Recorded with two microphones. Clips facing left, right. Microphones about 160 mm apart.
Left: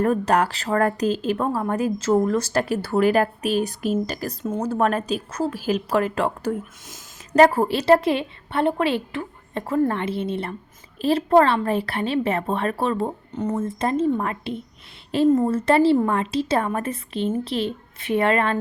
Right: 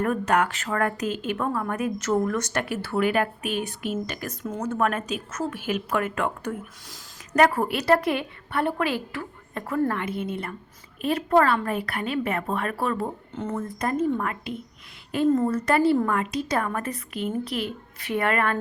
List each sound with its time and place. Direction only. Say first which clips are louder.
0.0 s a woman's voice: left 3 dB; 35° left (ahead or behind)